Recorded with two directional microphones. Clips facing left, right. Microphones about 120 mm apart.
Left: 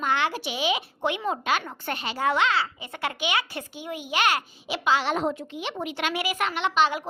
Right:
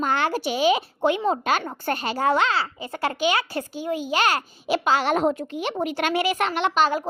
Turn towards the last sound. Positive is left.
turn(degrees=-45)  # may be behind; listen again after turning